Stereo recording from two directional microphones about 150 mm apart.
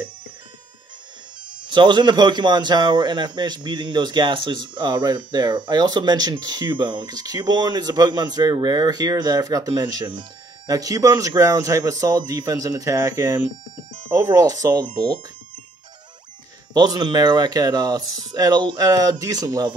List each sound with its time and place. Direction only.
1.6 s speech: 30° right (ahead or behind)
16.7 s speech: 25° right (ahead or behind)